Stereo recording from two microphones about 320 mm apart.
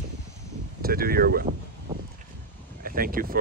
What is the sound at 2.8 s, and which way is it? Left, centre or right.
Speech, right.